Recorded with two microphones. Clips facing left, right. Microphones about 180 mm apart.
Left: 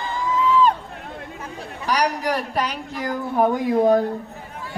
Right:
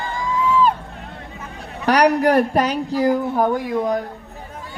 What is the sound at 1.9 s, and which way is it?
Speech, 60° right (ahead or behind).